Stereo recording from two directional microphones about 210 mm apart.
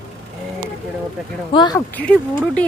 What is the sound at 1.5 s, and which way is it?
Speech, 20° left (ahead or behind).